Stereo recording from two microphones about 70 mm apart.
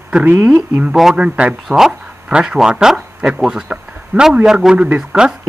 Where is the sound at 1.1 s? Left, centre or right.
Centre.